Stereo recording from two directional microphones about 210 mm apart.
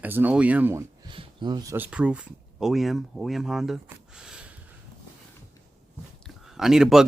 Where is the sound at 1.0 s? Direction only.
20° right (ahead or behind).